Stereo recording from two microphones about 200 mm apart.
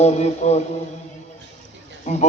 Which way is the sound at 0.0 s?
35° left (ahead or behind).